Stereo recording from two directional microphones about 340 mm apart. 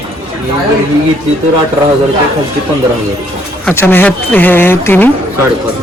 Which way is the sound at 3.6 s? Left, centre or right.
Centre.